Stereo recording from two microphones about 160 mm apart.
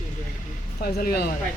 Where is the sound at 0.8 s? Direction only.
70° left (ahead or behind).